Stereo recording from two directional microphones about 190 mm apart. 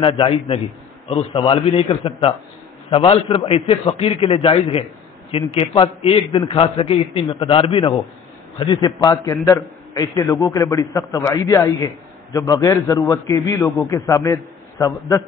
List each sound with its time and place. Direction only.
0.0 s a man's voice: 30° left (ahead or behind)